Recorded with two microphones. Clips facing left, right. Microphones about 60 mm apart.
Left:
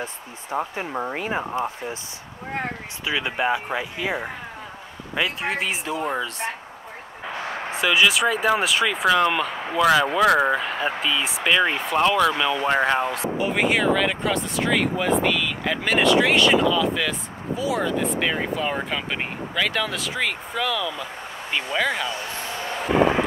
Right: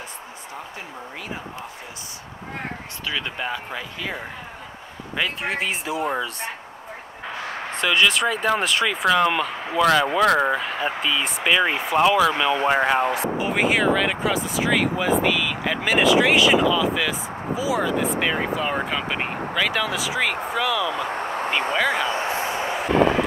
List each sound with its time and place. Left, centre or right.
0.6 s speech: left
3.1 s speech: centre
5.1 s speech: centre
7.7 s speech: centre
20.9 s vehicle: right
22.0 s speech: right
22.5 s vehicle: centre